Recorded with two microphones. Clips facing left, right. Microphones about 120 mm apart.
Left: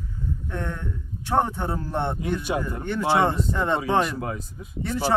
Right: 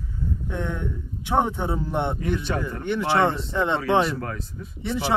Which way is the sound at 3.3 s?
Centre (ahead or behind).